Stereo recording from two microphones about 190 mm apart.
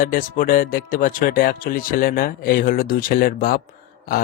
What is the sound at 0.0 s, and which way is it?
Speech, 45° left (ahead or behind).